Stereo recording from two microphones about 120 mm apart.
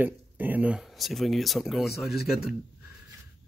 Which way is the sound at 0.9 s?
Centre (ahead or behind).